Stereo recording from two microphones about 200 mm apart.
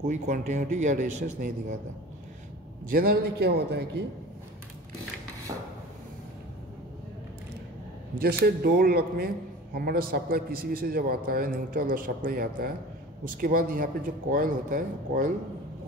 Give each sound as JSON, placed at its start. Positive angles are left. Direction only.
{"t": 0.0, "sound": "speech", "side_deg": -40}
{"t": 2.9, "sound": "a man's voice", "side_deg": -45}
{"t": 8.2, "sound": "a man's voice", "side_deg": -50}